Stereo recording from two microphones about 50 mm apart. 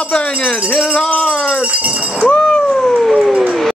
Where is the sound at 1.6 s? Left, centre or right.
Right.